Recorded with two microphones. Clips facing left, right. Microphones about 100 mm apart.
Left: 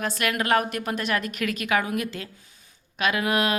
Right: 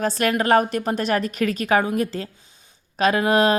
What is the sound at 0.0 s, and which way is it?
Speech, 35° right (ahead or behind).